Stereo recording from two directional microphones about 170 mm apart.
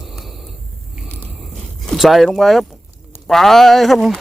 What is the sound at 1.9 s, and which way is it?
A man's voice, centre (ahead or behind).